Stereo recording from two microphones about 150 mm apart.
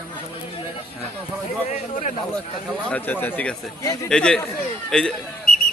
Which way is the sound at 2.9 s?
10° left (ahead or behind).